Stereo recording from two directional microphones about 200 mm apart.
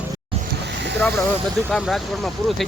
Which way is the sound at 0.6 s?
60° right (ahead or behind).